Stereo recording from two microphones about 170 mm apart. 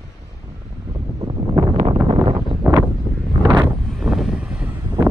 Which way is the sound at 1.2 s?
25° right (ahead or behind).